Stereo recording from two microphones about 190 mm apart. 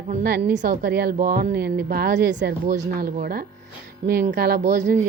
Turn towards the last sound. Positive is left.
turn(degrees=-40)  # may be behind; listen again after turning